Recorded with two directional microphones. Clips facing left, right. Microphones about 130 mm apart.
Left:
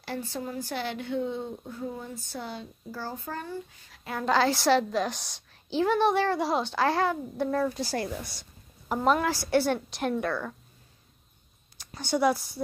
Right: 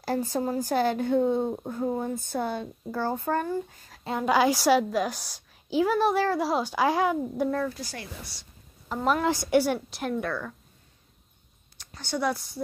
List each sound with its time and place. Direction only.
0.0 s speech: 40° right (ahead or behind)
4.2 s a woman's voice: 10° right (ahead or behind)
7.8 s a woman's voice: 35° left (ahead or behind)
9.2 s a woman's voice: 20° right (ahead or behind); by 10.5 s centre (ahead or behind)
11.8 s a woman's voice: 10° left (ahead or behind)